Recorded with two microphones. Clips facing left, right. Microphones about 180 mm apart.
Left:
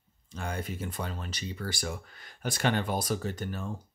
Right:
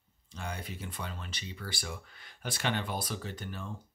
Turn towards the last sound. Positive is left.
turn(degrees=45)  # may be behind; listen again after turning